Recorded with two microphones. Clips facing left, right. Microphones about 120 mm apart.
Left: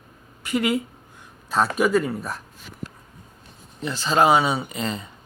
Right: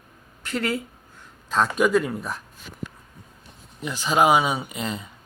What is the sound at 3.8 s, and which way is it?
Speech, 10° right (ahead or behind).